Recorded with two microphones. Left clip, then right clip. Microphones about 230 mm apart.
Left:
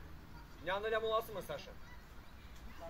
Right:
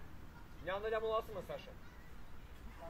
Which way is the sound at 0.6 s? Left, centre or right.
Left.